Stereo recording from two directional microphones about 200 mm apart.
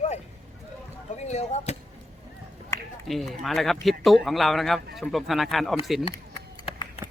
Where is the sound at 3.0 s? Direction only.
Centre (ahead or behind).